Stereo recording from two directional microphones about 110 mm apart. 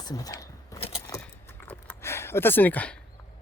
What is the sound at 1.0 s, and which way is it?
Keys jangling, 25° left (ahead or behind).